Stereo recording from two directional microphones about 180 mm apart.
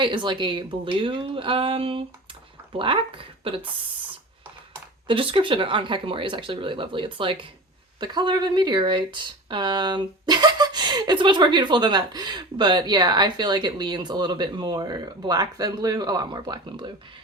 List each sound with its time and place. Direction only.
0.0 s speech: 25° right (ahead or behind)
5.0 s speech: 30° right (ahead or behind)